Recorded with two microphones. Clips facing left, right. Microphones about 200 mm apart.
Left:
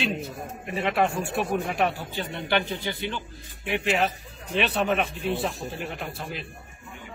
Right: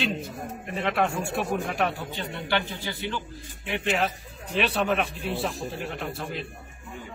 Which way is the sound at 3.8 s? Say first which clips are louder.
Even; centre (ahead or behind).